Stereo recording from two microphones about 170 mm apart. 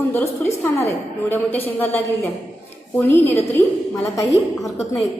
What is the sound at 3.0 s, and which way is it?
A woman's voice, 10° left (ahead or behind).